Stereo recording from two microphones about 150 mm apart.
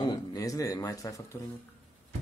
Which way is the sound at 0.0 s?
25° left (ahead or behind).